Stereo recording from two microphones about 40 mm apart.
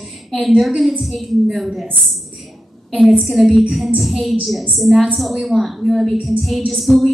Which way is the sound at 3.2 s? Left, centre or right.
Centre.